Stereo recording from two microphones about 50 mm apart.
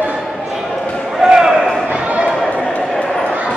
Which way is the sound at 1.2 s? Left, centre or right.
Centre.